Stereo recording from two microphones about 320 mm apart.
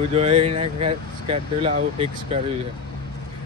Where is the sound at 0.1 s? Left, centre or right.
Centre.